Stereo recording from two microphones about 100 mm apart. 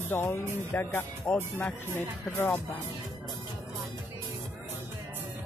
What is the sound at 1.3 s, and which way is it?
Speech, 10° left (ahead or behind).